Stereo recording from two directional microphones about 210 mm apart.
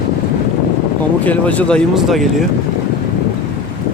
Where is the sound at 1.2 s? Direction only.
5° left (ahead or behind).